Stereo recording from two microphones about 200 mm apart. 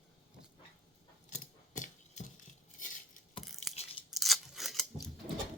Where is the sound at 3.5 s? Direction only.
Centre (ahead or behind).